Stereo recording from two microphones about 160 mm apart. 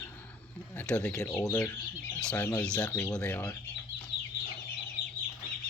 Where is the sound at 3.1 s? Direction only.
10° left (ahead or behind).